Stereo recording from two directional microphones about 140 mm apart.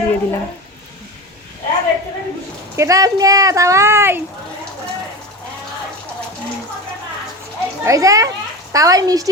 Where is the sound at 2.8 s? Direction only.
25° right (ahead or behind).